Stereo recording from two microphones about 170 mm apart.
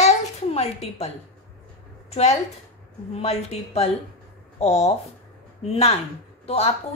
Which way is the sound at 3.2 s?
35° left (ahead or behind).